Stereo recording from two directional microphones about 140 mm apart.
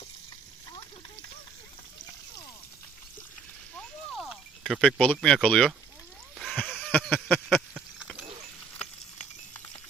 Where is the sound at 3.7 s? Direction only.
5° left (ahead or behind).